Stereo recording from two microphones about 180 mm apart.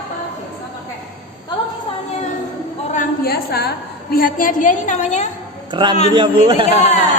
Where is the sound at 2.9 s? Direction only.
55° left (ahead or behind).